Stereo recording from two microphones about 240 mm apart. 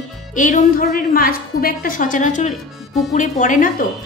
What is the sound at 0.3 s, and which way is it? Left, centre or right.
A woman's voice, left.